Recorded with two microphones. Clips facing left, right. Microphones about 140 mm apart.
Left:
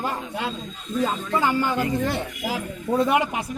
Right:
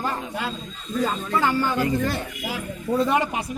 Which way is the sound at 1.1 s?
15° left (ahead or behind).